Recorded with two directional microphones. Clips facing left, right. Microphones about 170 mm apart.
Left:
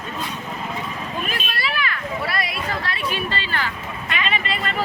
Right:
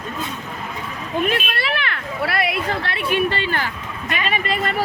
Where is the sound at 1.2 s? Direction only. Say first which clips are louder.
Right 5 dB; 60° right (ahead or behind); by 4.7 s 45° right (ahead or behind).